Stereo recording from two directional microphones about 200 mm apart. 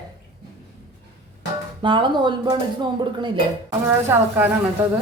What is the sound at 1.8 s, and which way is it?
Speech, 25° right (ahead or behind).